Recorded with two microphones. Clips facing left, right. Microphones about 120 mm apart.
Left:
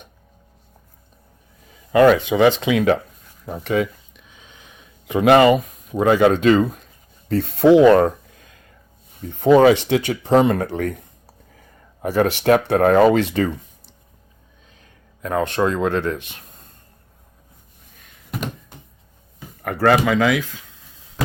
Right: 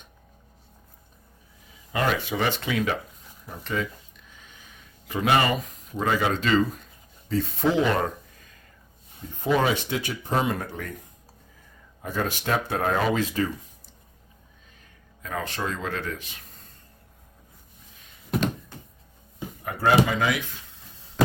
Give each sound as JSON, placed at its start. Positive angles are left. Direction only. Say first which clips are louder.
{"t": 2.3, "sound": "speech", "louder": "left 10 dB", "side_deg": 90}
{"t": 3.4, "sound": "speech", "louder": "left 9 dB", "side_deg": 65}
{"t": 5.1, "sound": "speech", "louder": "left 10 dB", "side_deg": 85}
{"t": 5.9, "sound": "speech", "louder": "left 10 dB", "side_deg": 70}
{"t": 7.3, "sound": "speech", "louder": "left 11 dB", "side_deg": 65}
{"t": 9.4, "sound": "speech", "louder": "left 11 dB", "side_deg": 70}
{"t": 12.0, "sound": "speech", "louder": "left 11 dB", "side_deg": 75}
{"t": 15.2, "sound": "speech", "louder": "left 11 dB", "side_deg": 65}
{"t": 19.6, "sound": "speech", "louder": "left 5 dB", "side_deg": 75}